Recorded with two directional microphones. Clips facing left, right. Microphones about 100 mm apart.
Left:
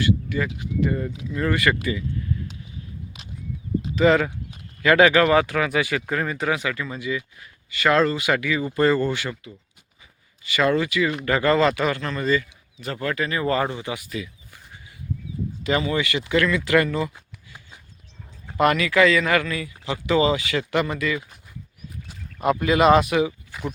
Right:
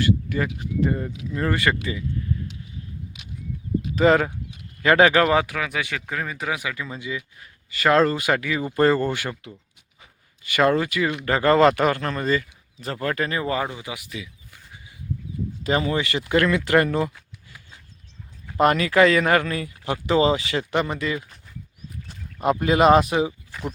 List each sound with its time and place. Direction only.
0.0 s speech: 45° right (ahead or behind)
0.9 s speech: 20° right (ahead or behind)
3.9 s speech: 35° right (ahead or behind)
5.5 s speech: centre (ahead or behind); by 7.3 s 20° right (ahead or behind)
7.7 s speech: 35° right (ahead or behind)
10.4 s speech: 50° right (ahead or behind)
13.4 s speech: 10° right (ahead or behind)
15.6 s speech: 40° right (ahead or behind)
18.6 s speech: 35° right (ahead or behind)
20.1 s speech: 35° right (ahead or behind)
22.0 s a sound: centre (ahead or behind)
22.4 s speech: 35° right (ahead or behind)
23.5 s speech: centre (ahead or behind)